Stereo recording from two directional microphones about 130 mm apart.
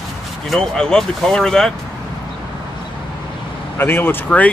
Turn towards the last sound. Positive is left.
turn(degrees=15)  # may be behind; listen again after turning